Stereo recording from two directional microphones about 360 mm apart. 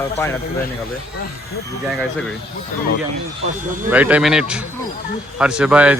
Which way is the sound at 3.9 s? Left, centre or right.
Centre.